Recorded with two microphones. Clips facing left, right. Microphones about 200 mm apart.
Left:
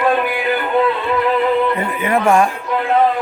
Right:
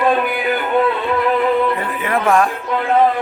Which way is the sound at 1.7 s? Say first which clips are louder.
Left 2 dB; centre (ahead or behind).